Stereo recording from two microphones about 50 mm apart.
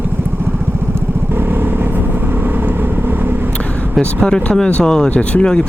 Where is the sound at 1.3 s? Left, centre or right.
Right.